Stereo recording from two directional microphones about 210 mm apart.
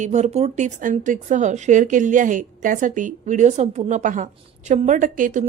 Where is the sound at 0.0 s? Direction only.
35° right (ahead or behind).